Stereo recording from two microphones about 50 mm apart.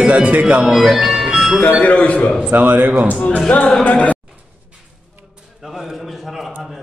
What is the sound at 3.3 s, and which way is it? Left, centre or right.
Speech, left.